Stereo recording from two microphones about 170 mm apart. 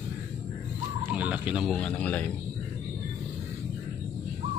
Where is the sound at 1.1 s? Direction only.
10° right (ahead or behind).